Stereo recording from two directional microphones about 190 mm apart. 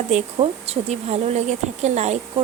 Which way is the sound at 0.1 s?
30° right (ahead or behind).